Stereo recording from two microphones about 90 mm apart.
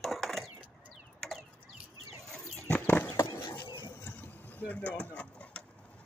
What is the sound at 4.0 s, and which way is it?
Vehicle, 25° left (ahead or behind).